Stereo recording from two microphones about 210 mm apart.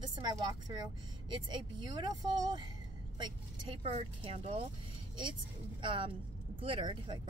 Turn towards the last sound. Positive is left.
turn(degrees=-25)  # may be behind; listen again after turning